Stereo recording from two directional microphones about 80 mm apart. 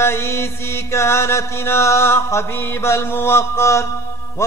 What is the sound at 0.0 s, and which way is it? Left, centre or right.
Mantra, left.